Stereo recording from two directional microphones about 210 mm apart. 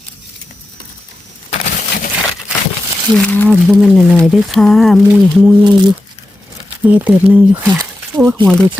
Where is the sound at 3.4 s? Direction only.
Centre (ahead or behind).